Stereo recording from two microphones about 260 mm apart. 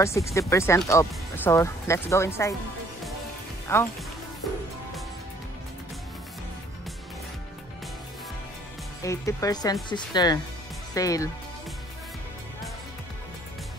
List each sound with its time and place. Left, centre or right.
0.0 s speech: centre
3.6 s speech: centre
9.0 s speech: centre